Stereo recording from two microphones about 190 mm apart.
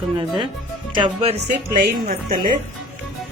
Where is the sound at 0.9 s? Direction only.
25° right (ahead or behind).